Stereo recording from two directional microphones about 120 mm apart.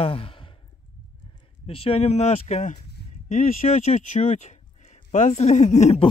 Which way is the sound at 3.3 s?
90° left.